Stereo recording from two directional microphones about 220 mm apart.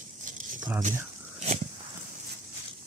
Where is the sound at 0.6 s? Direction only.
5° right (ahead or behind).